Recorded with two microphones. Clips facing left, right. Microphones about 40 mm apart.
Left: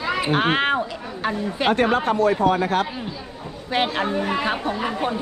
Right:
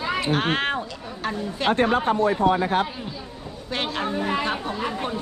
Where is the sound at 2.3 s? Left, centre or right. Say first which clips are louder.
Left 1 dB; left.